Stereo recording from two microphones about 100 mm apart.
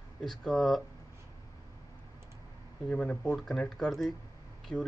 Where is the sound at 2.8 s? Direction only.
10° left (ahead or behind).